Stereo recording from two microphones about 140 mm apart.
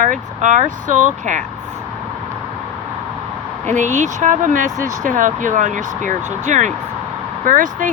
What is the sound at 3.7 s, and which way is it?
Speech, 60° right (ahead or behind).